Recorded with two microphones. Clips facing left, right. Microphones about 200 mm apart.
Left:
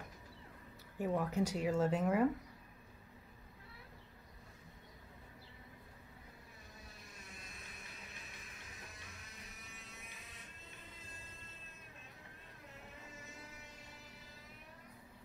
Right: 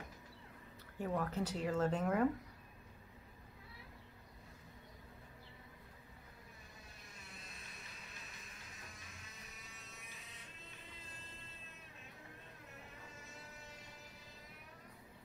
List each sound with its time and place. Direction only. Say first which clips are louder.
0.9 s speech: left 3 dB; 10° left (ahead or behind)